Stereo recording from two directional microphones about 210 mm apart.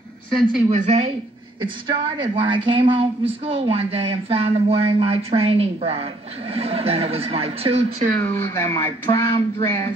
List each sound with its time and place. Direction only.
0.3 s a woman's voice: centre (ahead or behind)
0.7 s a woman's voice: 30° right (ahead or behind)
8.2 s a sound: 10° left (ahead or behind)